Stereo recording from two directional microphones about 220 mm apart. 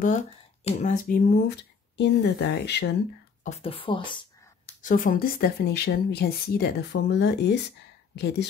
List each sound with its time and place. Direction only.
0.7 s speech: 35° left (ahead or behind)
3.4 s speech: 30° left (ahead or behind)
4.8 s speech: 40° left (ahead or behind)